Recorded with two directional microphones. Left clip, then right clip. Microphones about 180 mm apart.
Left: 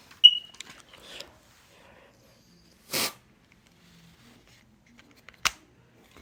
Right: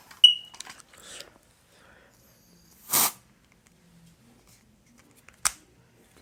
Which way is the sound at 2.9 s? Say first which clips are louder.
Right 3 dB; 30° right (ahead or behind).